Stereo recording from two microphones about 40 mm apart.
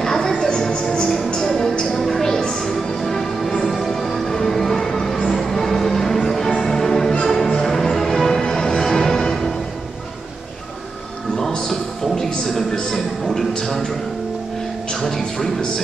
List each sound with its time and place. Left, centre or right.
0.0 s music: centre
3.0 s music: centre
11.5 s a sound: centre
15.0 s music: centre